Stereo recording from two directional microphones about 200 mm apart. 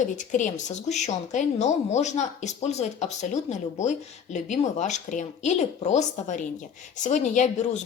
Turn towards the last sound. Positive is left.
turn(degrees=35)  # may be behind; listen again after turning